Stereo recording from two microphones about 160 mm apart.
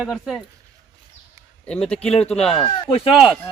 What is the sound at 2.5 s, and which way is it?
Speech, 35° left (ahead or behind).